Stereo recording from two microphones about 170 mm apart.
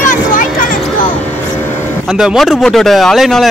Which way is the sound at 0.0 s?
50° left (ahead or behind).